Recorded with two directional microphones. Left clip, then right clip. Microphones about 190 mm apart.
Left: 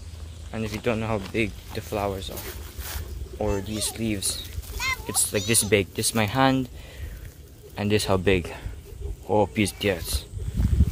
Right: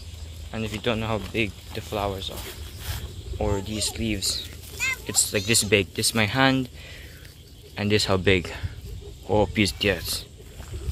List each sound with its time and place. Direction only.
0.5 s speech: centre (ahead or behind)
4.7 s a sound: 30° left (ahead or behind)
5.0 s speech: centre (ahead or behind)
7.7 s speech: 5° left (ahead or behind)